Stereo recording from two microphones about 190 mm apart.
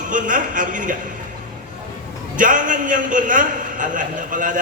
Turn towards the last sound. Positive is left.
turn(degrees=-45)  # may be behind; listen again after turning